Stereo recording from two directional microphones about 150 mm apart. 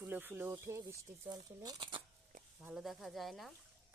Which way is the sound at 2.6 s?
Centre (ahead or behind).